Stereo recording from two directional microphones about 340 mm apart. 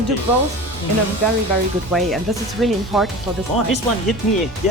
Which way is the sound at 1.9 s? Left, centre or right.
Centre.